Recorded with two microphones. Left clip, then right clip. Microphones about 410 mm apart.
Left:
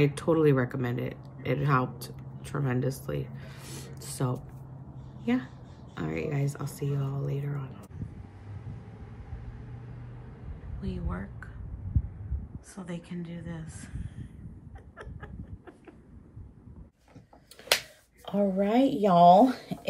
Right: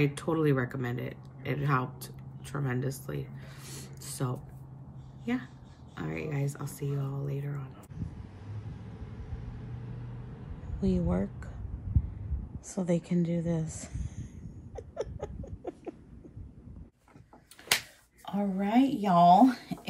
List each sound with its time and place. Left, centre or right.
0.0 s speech: centre
10.8 s speech: centre
12.5 s speech: centre
15.0 s a sound: centre
18.2 s speech: centre